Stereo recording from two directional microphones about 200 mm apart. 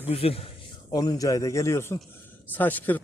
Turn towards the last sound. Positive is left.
turn(degrees=10)  # may be behind; listen again after turning